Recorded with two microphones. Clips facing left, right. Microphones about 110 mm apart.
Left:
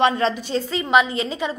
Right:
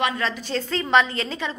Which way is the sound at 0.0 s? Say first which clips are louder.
Left 6 dB; 25° left (ahead or behind).